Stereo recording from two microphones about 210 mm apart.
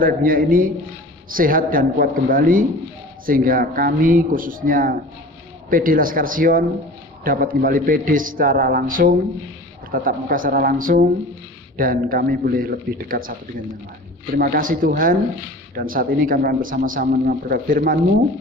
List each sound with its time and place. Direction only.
0.0 s a man's voice: 40° right (ahead or behind)
14.3 s a man's voice: 45° right (ahead or behind)